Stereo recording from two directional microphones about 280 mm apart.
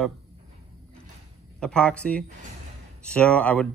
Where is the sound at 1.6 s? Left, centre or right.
Centre.